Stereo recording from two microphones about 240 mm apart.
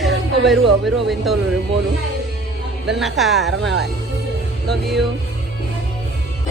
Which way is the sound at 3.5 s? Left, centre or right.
Right.